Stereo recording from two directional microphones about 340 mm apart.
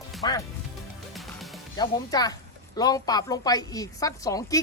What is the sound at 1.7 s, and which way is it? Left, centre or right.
A woman's voice, centre.